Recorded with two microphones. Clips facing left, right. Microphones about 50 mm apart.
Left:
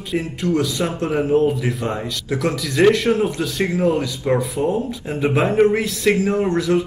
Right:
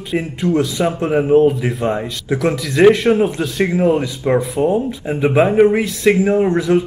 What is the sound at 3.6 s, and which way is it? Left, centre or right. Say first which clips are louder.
Speech: right 3 dB; right.